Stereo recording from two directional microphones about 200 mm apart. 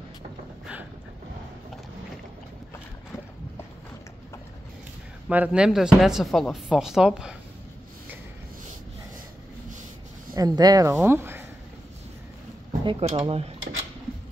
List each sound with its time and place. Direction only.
5.3 s speech: 5° right (ahead or behind)
10.3 s speech: 20° right (ahead or behind)
12.8 s speech: 30° right (ahead or behind)